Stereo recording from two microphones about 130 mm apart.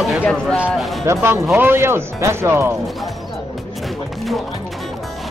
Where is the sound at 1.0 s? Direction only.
20° right (ahead or behind).